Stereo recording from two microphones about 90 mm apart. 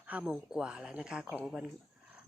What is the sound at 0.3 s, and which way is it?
Speech, 10° right (ahead or behind).